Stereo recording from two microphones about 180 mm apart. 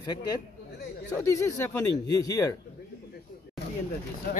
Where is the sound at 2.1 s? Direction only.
20° left (ahead or behind).